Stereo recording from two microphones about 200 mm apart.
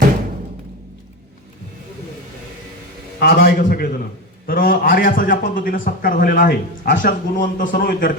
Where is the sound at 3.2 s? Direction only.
50° left (ahead or behind).